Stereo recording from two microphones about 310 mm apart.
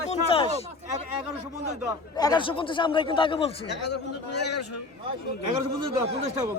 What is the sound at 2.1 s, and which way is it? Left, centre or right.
Speech, centre.